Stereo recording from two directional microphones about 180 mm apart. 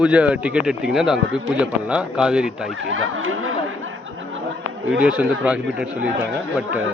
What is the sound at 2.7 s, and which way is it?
Speech, 90° right.